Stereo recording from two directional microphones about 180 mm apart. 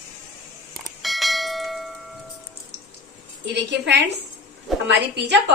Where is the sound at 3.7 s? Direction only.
70° right (ahead or behind).